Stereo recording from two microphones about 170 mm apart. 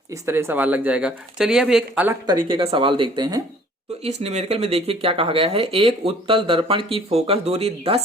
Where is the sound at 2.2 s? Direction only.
25° right (ahead or behind).